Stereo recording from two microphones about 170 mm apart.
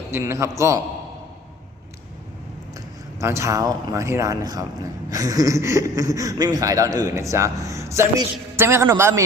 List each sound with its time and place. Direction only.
0.1 s a man's voice: 15° right (ahead or behind)
3.2 s a man's voice: 15° right (ahead or behind)